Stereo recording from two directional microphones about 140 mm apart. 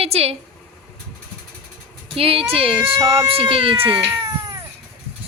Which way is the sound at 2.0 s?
45° right (ahead or behind).